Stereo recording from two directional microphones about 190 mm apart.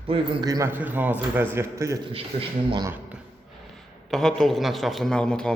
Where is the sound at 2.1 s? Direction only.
25° right (ahead or behind).